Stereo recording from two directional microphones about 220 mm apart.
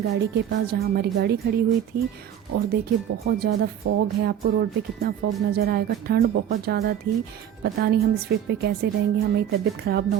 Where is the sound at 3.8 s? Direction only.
45° right (ahead or behind).